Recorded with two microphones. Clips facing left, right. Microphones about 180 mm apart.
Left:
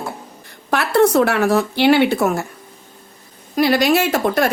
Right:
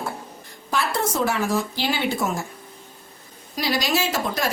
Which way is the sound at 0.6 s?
65° left (ahead or behind).